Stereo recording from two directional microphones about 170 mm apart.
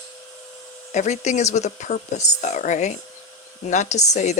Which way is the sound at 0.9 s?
45° left (ahead or behind).